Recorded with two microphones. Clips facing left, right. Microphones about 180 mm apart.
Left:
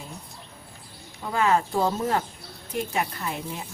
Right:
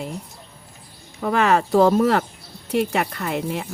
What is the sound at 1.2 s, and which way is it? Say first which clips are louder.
Speech: right 4 dB; 75° right (ahead or behind).